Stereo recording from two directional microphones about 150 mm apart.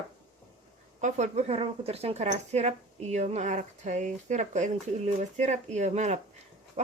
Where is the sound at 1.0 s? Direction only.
50° right (ahead or behind).